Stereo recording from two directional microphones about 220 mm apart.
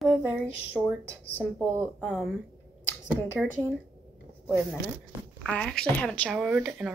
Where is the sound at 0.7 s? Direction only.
Centre (ahead or behind).